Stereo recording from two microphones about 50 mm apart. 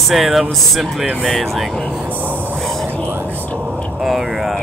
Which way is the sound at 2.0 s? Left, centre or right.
Right.